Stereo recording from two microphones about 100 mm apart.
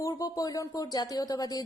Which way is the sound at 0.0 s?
35° left (ahead or behind).